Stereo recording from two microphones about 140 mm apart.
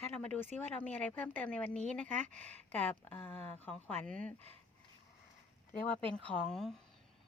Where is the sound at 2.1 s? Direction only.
60° right (ahead or behind).